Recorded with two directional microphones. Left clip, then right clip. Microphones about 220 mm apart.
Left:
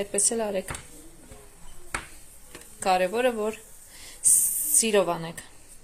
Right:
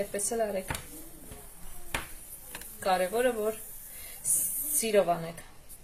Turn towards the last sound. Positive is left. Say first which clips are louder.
# left 2 dB
turn(degrees=40)  # may be behind; listen again after turning